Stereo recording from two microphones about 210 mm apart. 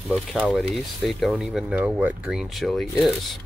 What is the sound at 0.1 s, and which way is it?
Speech, 5° right (ahead or behind).